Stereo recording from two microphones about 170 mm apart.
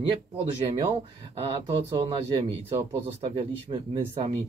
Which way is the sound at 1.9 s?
30° right (ahead or behind).